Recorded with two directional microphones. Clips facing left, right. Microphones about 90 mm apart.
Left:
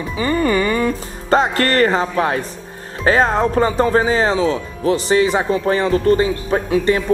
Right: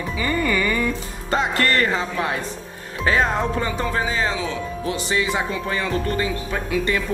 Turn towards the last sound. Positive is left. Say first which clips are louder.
# left 6 dB
turn(degrees=30)  # may be behind; listen again after turning